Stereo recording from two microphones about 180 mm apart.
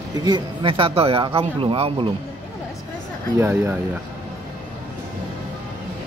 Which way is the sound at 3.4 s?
15° right (ahead or behind).